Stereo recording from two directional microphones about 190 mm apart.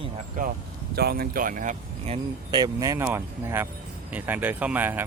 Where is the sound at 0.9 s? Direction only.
55° right (ahead or behind); by 2.2 s 35° right (ahead or behind).